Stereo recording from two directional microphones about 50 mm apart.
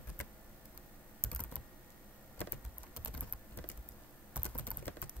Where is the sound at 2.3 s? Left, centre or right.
Left.